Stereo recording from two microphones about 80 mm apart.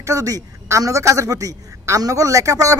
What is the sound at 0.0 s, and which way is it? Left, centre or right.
A man's voice, right.